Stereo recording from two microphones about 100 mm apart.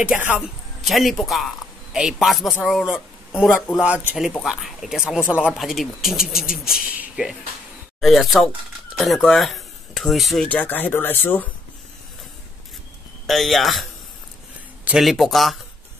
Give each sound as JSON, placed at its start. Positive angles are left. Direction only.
{"t": 0.4, "sound": "a man's voice", "side_deg": 0}
{"t": 4.4, "sound": "speech", "side_deg": 0}
{"t": 5.6, "sound": "speech", "side_deg": 0}
{"t": 8.0, "sound": "speech", "side_deg": 0}
{"t": 10.5, "sound": "speech", "side_deg": 15}
{"t": 13.3, "sound": "speech", "side_deg": 0}
{"t": 15.0, "sound": "speech", "side_deg": 0}